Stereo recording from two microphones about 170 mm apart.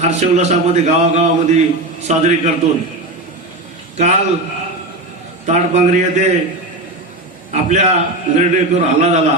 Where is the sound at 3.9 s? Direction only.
45° right (ahead or behind).